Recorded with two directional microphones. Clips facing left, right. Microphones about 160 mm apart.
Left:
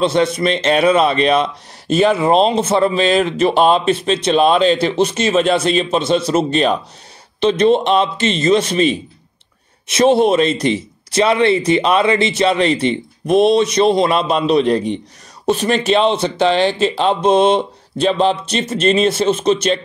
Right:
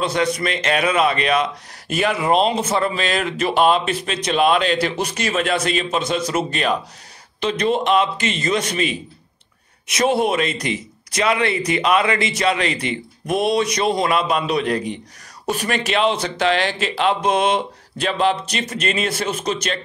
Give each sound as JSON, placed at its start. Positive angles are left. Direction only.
{"t": 0.0, "sound": "speech", "side_deg": 25}